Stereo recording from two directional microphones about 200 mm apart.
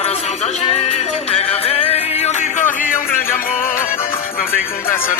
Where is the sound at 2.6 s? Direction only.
10° left (ahead or behind).